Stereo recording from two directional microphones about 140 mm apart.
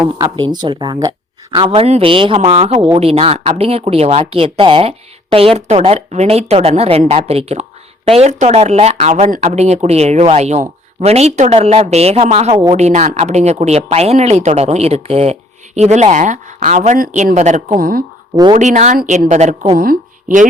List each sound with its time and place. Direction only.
0.2 s speech: 30° right (ahead or behind)
1.5 s speech: 40° right (ahead or behind); by 17.3 s 80° right
17.3 s a woman's voice: 55° right (ahead or behind)
17.7 s speech: 90° right
18.5 s a woman's voice: 60° right (ahead or behind)
19.7 s speech: 80° right